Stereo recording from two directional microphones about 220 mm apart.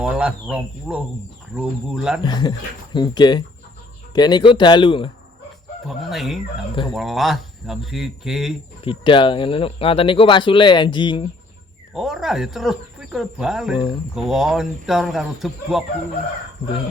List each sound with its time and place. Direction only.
0.0 s speech: 5° right (ahead or behind)
2.2 s speech: 20° left (ahead or behind)
5.9 s speech: centre (ahead or behind)
8.8 s speech: 20° left (ahead or behind)
11.9 s speech: centre (ahead or behind)